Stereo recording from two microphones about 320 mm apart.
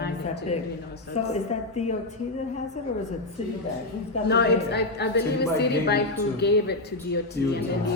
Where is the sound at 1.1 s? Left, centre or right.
Left.